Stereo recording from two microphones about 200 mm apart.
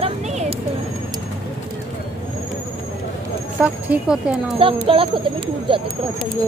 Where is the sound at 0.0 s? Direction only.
30° right (ahead or behind).